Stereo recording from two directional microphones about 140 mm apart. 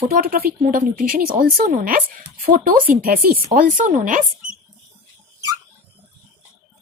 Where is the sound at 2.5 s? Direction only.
90° right.